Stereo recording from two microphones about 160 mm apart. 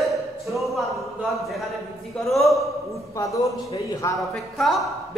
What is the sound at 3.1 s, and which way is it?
A man's voice, 20° left (ahead or behind).